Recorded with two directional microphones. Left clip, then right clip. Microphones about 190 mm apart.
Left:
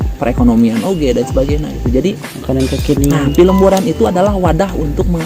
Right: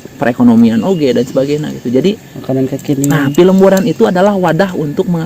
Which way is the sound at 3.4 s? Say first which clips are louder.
Right 2 dB; 50° right (ahead or behind).